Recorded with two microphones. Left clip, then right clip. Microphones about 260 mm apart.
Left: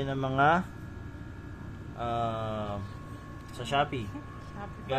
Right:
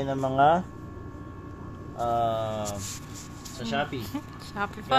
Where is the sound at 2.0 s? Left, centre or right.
Centre.